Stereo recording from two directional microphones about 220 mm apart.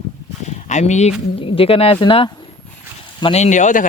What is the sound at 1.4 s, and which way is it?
Speech, 25° left (ahead or behind).